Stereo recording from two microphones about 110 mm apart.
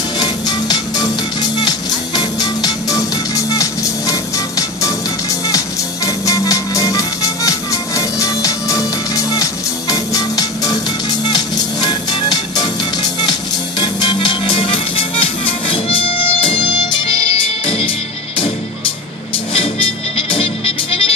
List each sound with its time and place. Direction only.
0.2 s music: 40° left (ahead or behind)
6.0 s music: 30° left (ahead or behind); by 17.9 s 55° left (ahead or behind)
19.5 s music: 60° left (ahead or behind)